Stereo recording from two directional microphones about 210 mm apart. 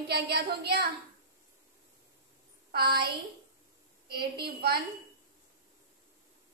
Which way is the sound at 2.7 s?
50° right (ahead or behind).